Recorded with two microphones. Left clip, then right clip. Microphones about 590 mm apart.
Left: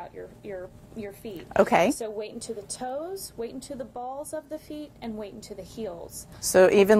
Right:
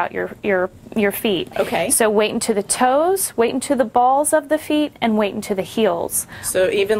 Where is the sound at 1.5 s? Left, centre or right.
Left.